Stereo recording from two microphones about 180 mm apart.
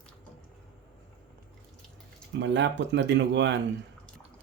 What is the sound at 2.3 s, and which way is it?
Speech, 80° right.